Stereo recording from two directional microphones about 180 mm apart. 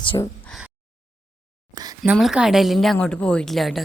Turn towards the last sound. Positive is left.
turn(degrees=0)  # may be behind; listen again after turning